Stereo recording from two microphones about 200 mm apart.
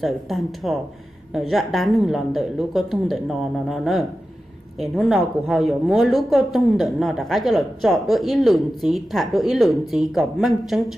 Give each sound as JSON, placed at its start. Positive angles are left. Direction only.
{"t": 0.0, "sound": "a woman's voice", "side_deg": 0}